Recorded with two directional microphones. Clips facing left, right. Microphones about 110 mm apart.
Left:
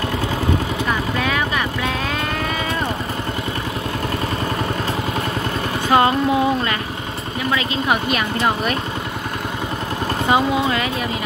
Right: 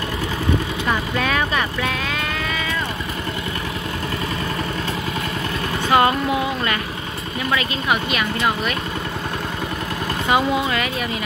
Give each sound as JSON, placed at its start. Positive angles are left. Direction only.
{"t": 5.9, "sound": "vehicle", "side_deg": 25}
{"t": 10.3, "sound": "speech", "side_deg": 25}